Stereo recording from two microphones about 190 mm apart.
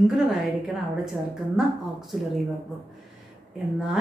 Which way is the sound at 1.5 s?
Centre (ahead or behind).